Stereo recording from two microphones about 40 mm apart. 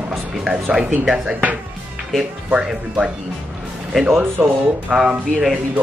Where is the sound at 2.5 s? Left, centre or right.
Right.